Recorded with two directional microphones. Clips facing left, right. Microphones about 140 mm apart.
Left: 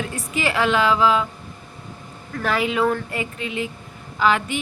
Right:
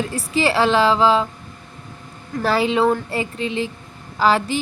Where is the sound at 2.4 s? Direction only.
30° right (ahead or behind).